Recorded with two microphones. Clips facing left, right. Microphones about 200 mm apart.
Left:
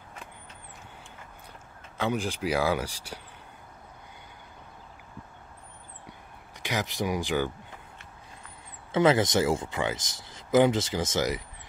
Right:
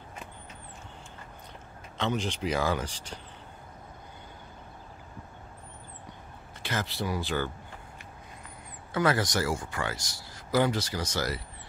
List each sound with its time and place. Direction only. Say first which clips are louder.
2.0 s speech: left 1 dB; 10° left (ahead or behind)
6.6 s speech: left 3 dB; 15° left (ahead or behind)
8.9 s speech: left 5 dB; 20° left (ahead or behind)